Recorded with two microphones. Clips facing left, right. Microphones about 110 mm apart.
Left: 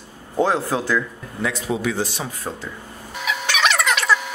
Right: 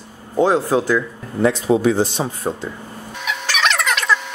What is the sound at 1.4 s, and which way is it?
Speech, 35° right (ahead or behind).